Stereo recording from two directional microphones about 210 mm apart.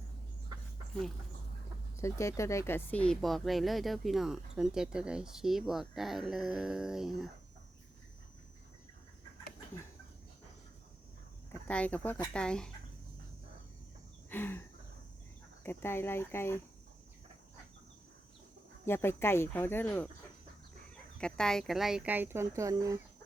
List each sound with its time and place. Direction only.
2.0 s speech: 15° left (ahead or behind); by 7.3 s centre (ahead or behind)
11.7 s speech: 5° left (ahead or behind)
14.3 s a sound: 10° left (ahead or behind)
15.6 s speech: 10° left (ahead or behind)
18.9 s speech: 10° left (ahead or behind)
21.2 s speech: 5° left (ahead or behind); by 23.0 s 15° right (ahead or behind)